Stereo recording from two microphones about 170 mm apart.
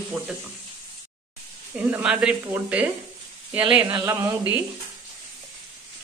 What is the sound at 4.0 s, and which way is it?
Speech, 15° right (ahead or behind).